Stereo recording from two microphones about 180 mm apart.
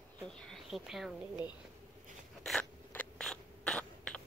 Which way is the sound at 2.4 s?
5° left (ahead or behind).